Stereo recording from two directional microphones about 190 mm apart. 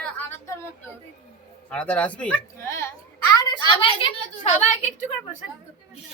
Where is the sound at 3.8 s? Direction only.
30° left (ahead or behind).